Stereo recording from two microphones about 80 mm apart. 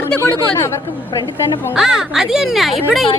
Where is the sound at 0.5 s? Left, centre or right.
Left.